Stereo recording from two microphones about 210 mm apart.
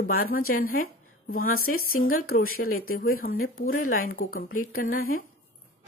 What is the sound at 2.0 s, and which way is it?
Speech, 40° left (ahead or behind).